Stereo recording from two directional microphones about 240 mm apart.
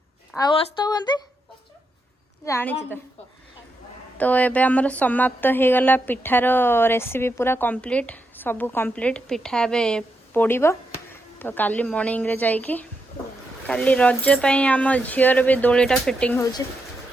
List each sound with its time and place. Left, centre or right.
0.3 s speech: centre
2.4 s speech: centre
4.2 s a woman's voice: centre